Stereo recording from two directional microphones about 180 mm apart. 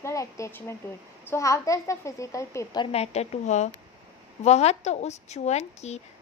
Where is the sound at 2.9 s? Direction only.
35° left (ahead or behind).